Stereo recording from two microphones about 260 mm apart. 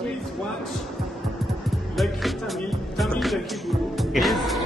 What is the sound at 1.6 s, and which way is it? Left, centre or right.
Speech, centre.